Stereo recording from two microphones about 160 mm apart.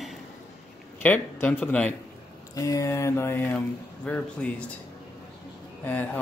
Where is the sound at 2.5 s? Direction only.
20° left (ahead or behind).